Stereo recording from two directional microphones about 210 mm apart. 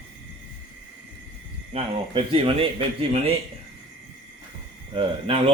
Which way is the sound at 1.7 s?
25° right (ahead or behind).